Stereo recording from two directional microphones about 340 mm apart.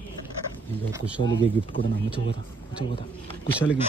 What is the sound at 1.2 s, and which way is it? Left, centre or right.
Speech, centre.